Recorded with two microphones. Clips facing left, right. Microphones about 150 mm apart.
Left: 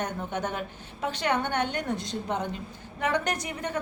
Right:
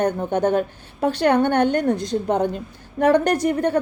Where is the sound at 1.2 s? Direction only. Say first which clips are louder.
Right 10 dB; 60° right (ahead or behind).